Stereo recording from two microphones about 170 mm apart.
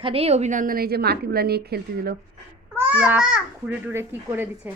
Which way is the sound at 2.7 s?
10° right (ahead or behind).